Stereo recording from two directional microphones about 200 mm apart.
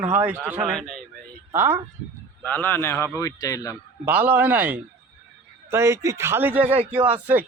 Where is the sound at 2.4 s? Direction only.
10° left (ahead or behind).